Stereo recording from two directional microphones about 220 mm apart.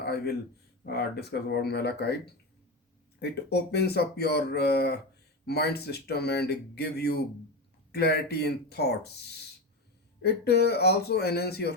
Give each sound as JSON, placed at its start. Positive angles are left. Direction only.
{"t": 0.0, "sound": "a sound", "side_deg": 45}
{"t": 0.9, "sound": "speech", "side_deg": 45}
{"t": 3.2, "sound": "speech", "side_deg": 45}